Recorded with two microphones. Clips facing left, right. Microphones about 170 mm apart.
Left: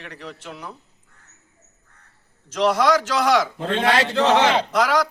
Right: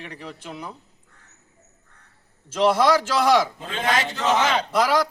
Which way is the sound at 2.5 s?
5° right (ahead or behind).